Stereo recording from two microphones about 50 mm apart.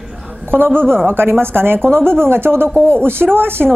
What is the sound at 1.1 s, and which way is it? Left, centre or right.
Speech, right.